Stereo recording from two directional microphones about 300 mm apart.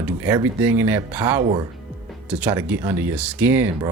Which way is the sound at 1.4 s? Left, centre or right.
Centre.